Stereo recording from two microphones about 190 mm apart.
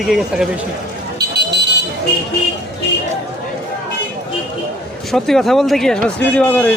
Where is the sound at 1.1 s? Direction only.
60° right (ahead or behind).